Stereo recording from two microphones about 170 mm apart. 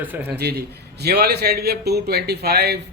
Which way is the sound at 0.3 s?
70° right (ahead or behind).